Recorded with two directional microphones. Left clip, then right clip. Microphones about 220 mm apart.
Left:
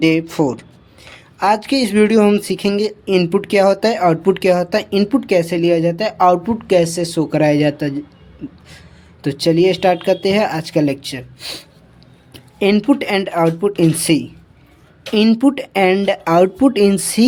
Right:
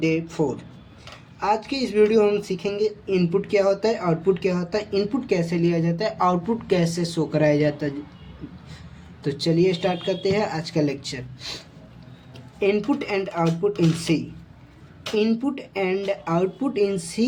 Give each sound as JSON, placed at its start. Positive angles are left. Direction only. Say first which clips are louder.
{"t": 0.0, "sound": "speech", "louder": "left 8 dB", "side_deg": 50}
{"t": 9.2, "sound": "speech", "louder": "left 7 dB", "side_deg": 35}
{"t": 12.5, "sound": "speech", "louder": "left 7 dB", "side_deg": 45}